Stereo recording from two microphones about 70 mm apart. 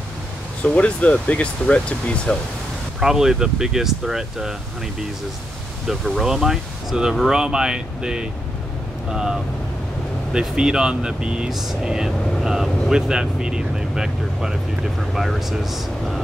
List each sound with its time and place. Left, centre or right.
0.7 s speech: centre
3.0 s speech: centre
5.9 s speech: centre